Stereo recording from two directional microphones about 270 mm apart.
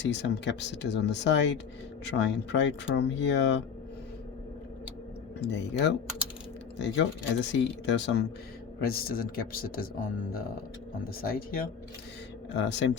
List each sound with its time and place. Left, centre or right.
0.0 s speech: left
5.4 s speech: left